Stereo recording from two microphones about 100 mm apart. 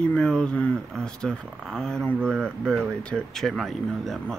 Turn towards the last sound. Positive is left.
turn(degrees=0)  # may be behind; listen again after turning